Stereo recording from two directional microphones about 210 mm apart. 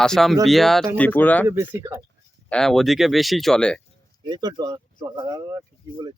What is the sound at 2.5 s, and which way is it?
Speech, centre (ahead or behind).